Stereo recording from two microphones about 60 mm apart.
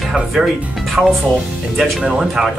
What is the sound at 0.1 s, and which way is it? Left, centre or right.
Speech, centre.